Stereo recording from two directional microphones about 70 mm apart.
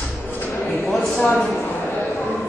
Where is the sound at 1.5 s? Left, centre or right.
Left.